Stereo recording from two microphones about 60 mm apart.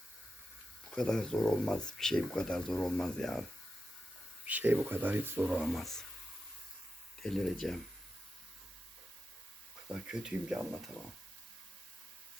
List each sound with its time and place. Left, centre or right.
0.9 s speech: centre
4.4 s speech: right
4.9 s speech: right
5.5 s speech: centre
5.7 s speech: centre
7.2 s speech: centre
9.9 s speech: centre